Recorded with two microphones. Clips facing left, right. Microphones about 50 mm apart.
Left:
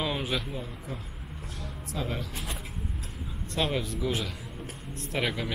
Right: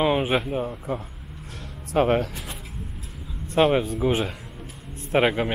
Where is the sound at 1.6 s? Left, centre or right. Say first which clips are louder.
Right 14 dB; right.